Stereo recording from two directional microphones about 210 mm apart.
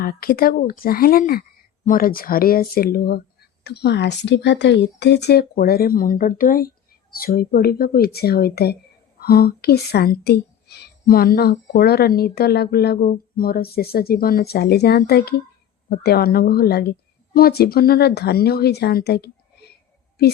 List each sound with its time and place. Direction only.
0.0 s speech: 45° left (ahead or behind)